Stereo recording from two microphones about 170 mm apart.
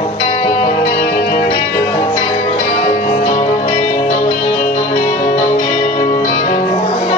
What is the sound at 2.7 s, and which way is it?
Music, 45° left (ahead or behind).